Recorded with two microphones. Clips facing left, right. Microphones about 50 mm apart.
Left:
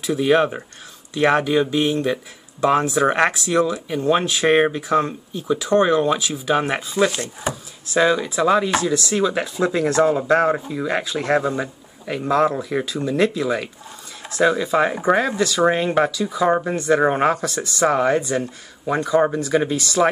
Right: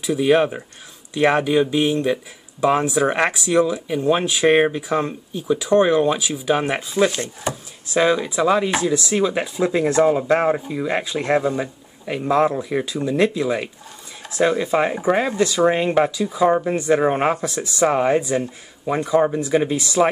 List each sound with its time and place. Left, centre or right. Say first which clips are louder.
0.0 s speech: even; centre
8.6 s chopping: even; centre
11.4 s speech: right 1 dB; centre
12.1 s chopping: even; centre
14.7 s chopping: left 1 dB; centre